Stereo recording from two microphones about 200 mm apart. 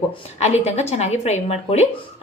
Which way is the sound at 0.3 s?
30° left (ahead or behind).